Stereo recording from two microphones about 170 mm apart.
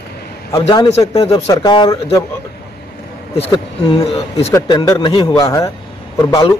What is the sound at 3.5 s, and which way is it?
Speech, 30° left (ahead or behind).